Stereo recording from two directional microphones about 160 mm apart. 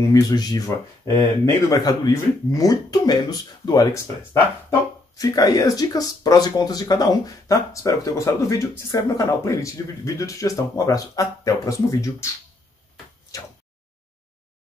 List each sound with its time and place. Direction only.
0.0 s speech: 20° left (ahead or behind)